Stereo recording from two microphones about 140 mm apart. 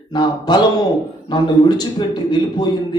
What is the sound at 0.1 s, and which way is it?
Speech, 30° left (ahead or behind).